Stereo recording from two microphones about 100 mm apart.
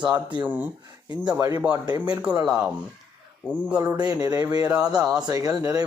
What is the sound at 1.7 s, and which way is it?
Speech, 45° right (ahead or behind).